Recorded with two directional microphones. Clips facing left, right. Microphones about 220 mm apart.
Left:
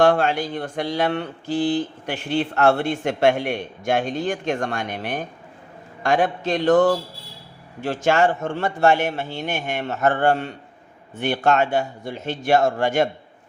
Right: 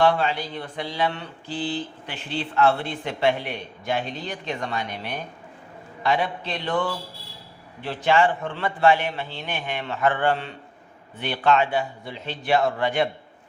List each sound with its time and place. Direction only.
0.0 s speech: 50° left (ahead or behind)